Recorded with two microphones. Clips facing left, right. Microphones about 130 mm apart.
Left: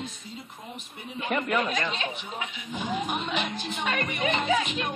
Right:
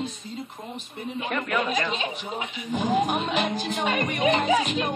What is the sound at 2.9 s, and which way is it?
Music, 45° right (ahead or behind).